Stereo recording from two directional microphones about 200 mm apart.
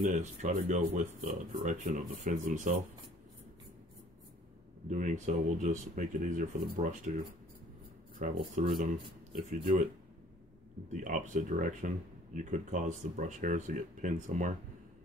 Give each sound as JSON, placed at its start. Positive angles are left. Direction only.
{"t": 0.0, "sound": "speech", "side_deg": -35}
{"t": 4.8, "sound": "speech", "side_deg": -40}
{"t": 8.4, "sound": "speech", "side_deg": -30}
{"t": 8.7, "sound": "speech", "side_deg": -45}
{"t": 10.9, "sound": "speech", "side_deg": -40}